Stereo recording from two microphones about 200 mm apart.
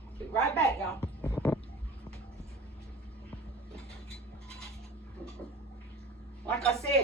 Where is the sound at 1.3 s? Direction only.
10° left (ahead or behind).